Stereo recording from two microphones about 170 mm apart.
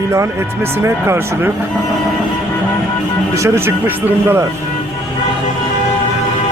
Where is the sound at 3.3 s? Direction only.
15° right (ahead or behind).